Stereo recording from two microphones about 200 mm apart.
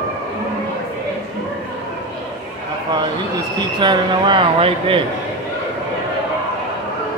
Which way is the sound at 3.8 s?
25° right (ahead or behind).